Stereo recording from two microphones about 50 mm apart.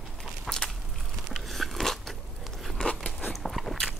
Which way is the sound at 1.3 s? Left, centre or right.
Centre.